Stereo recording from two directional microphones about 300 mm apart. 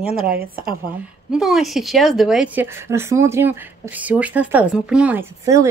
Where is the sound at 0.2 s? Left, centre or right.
Right.